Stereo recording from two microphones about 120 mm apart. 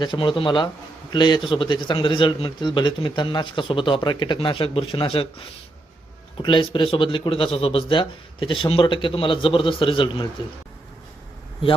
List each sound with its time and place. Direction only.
0.0 s a man's voice: 40° left (ahead or behind)